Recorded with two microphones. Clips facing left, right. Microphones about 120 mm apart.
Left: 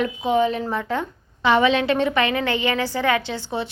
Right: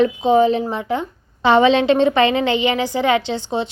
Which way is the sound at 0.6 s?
15° right (ahead or behind).